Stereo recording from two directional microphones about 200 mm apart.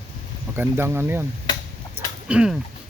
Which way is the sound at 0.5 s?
10° right (ahead or behind).